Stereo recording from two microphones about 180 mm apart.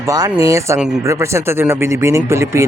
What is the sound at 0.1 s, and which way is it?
Speech, 20° right (ahead or behind).